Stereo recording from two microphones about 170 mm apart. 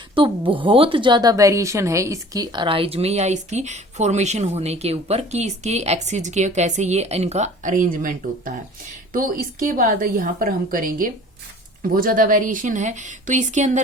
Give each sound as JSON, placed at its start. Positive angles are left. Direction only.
{"t": 0.1, "sound": "a woman's voice", "side_deg": -30}